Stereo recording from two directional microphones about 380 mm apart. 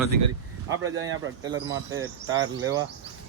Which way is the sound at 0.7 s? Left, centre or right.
Right.